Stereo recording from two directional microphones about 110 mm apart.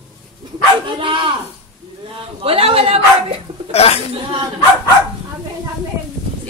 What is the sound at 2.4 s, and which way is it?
Speech, 60° right (ahead or behind).